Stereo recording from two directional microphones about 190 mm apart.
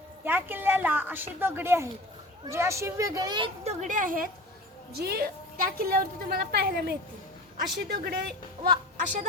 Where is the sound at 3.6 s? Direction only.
40° right (ahead or behind); by 8.3 s 60° right (ahead or behind).